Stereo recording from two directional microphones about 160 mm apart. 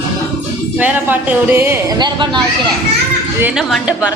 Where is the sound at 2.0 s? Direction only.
30° right (ahead or behind).